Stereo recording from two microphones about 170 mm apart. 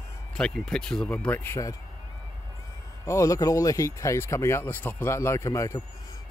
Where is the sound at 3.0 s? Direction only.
20° left (ahead or behind).